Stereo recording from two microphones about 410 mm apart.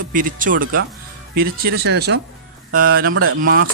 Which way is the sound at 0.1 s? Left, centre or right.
Centre.